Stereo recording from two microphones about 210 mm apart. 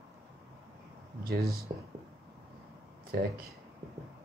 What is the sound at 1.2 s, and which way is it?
Speech, 45° right (ahead or behind).